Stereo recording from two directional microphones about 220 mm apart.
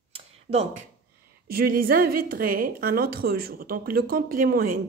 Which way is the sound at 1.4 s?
45° right (ahead or behind).